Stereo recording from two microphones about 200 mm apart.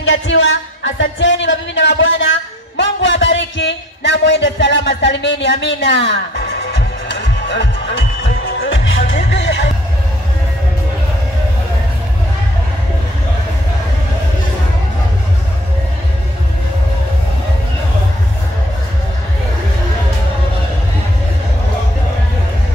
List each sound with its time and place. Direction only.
0.0 s speech: 75° left (ahead or behind)
2.8 s a sound: 65° left (ahead or behind)
8.2 s music: 55° left (ahead or behind)